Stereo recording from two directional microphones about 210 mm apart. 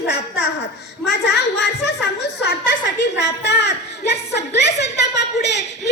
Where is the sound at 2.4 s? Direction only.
55° left (ahead or behind).